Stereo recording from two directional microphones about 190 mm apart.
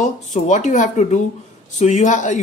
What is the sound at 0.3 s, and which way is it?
Speech, 40° left (ahead or behind).